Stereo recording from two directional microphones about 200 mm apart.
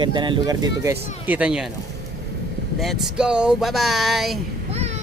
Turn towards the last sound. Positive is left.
turn(degrees=0)  # may be behind; listen again after turning